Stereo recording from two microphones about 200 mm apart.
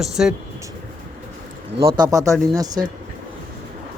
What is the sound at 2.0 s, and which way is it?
Speech, 15° right (ahead or behind).